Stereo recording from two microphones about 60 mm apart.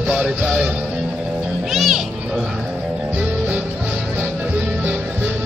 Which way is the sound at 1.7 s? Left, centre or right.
Centre.